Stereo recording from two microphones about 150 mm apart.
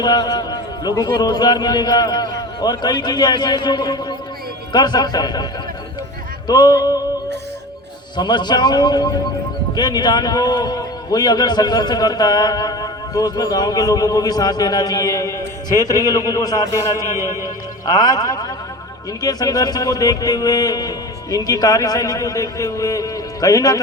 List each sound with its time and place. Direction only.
0.0 s a man's voice: 30° left (ahead or behind)
6.5 s a man's voice: 25° left (ahead or behind)
8.1 s a man's voice: 30° left (ahead or behind)